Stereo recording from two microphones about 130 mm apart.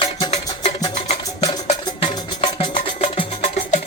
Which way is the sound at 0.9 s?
55° left (ahead or behind).